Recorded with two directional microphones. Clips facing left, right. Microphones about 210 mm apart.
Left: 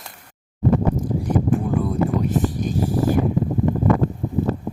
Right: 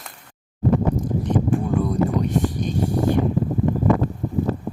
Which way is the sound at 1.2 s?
5° left (ahead or behind).